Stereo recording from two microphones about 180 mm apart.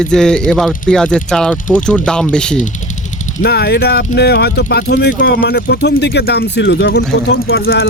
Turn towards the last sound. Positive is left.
turn(degrees=60)  # may be behind; listen again after turning